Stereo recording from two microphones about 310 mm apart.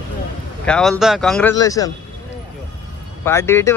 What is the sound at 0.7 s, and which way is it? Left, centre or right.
Speech, centre.